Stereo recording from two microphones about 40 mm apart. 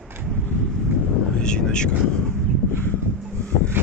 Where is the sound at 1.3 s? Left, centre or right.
Left.